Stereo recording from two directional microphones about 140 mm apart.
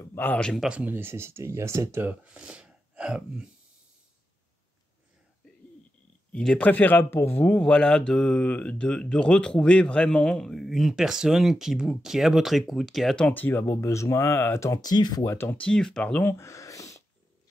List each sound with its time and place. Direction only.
0.0 s speech: 15° left (ahead or behind)
0.7 s speech: 10° right (ahead or behind)
6.3 s speech: 5° left (ahead or behind); by 15.3 s 25° left (ahead or behind)
15.3 s speech: 10° left (ahead or behind)